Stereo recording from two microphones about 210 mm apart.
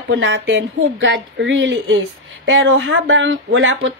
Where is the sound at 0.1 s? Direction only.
65° right (ahead or behind).